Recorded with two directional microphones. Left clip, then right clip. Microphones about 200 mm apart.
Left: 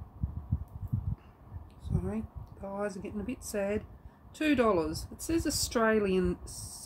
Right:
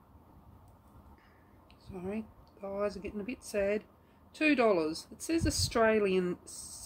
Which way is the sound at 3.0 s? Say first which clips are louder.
Left 1 dB; 15° left (ahead or behind).